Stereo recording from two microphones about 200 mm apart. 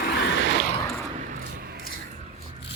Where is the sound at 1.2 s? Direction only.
45° right (ahead or behind).